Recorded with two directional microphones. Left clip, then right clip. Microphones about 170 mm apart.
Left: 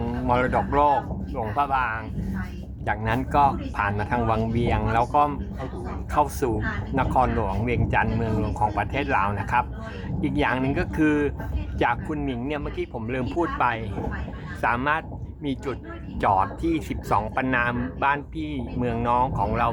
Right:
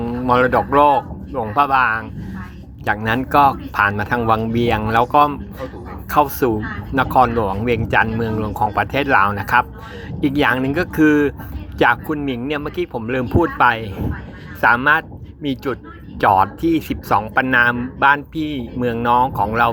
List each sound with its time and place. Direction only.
0.3 s speech: 30° right (ahead or behind)